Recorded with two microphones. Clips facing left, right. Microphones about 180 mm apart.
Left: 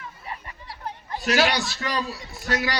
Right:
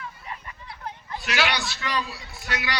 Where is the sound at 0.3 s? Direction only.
35° left (ahead or behind).